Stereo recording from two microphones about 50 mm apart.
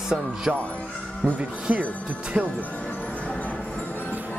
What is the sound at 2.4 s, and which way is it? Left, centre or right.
Speech, right.